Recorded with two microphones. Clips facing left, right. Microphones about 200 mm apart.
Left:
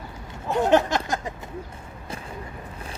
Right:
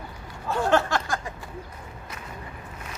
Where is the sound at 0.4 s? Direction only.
20° left (ahead or behind).